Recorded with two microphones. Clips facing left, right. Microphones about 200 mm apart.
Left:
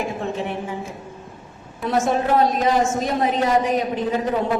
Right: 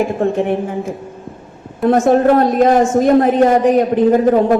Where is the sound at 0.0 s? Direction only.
55° right (ahead or behind).